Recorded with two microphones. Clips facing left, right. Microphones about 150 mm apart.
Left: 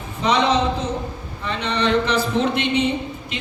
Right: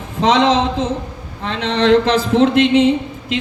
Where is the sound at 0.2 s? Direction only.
90° right.